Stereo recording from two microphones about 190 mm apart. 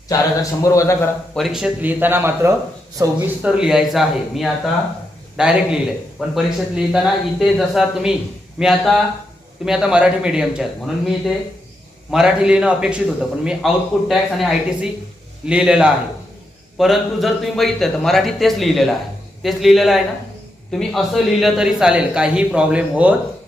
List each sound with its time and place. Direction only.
0.6 s a man's voice: 15° left (ahead or behind)
1.4 s a man's voice: centre (ahead or behind)